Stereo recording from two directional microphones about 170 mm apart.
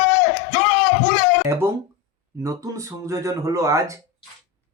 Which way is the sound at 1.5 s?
15° right (ahead or behind).